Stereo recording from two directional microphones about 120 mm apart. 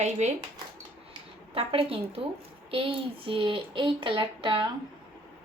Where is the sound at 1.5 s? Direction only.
50° right (ahead or behind).